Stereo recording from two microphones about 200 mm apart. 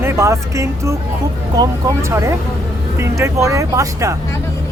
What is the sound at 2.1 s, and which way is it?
Speech, 15° right (ahead or behind).